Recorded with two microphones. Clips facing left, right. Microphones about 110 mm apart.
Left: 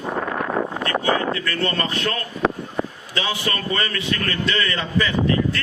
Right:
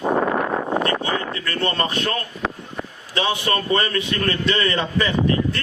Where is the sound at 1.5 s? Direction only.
25° right (ahead or behind).